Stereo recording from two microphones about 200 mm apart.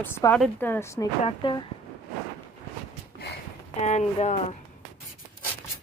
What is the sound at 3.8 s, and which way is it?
Speech, 35° left (ahead or behind).